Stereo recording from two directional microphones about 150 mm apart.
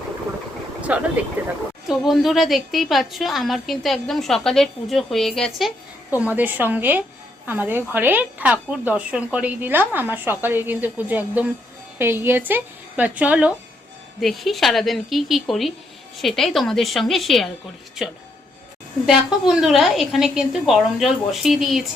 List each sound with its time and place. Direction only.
0.8 s vehicle: 10° right (ahead or behind)
1.4 s a woman's voice: 10° right (ahead or behind)